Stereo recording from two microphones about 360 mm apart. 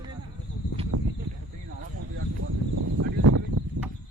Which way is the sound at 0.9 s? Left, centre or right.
Right.